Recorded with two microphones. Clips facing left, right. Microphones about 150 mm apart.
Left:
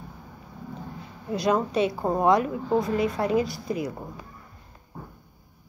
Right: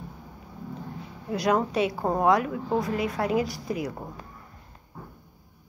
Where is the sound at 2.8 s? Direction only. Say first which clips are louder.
Left 2 dB; 30° left (ahead or behind).